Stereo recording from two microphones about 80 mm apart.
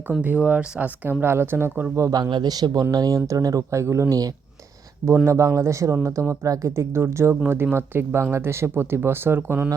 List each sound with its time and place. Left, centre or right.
0.2 s speech: centre
1.2 s speech: right
2.0 s speech: right
2.3 s a man's voice: right
5.0 s speech: right